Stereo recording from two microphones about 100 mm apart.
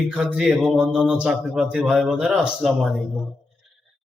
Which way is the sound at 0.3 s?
5° right (ahead or behind).